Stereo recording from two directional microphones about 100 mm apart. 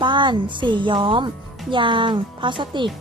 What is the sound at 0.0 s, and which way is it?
A woman's voice, 55° right (ahead or behind).